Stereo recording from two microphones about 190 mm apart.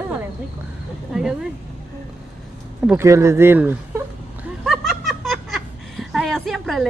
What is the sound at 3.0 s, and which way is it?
Speech, 15° right (ahead or behind).